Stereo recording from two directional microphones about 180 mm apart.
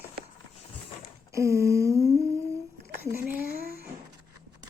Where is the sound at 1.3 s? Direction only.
15° right (ahead or behind).